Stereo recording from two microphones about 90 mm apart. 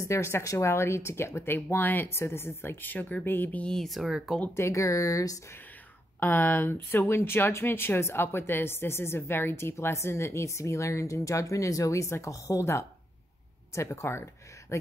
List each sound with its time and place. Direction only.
0.0 s speech: 35° left (ahead or behind); by 4.4 s centre (ahead or behind)
4.6 s speech: 35° left (ahead or behind)
6.1 s speech: 20° left (ahead or behind)